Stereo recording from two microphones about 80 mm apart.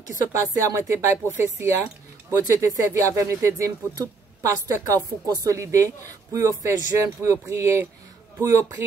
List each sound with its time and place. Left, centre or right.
0.3 s a woman's voice: right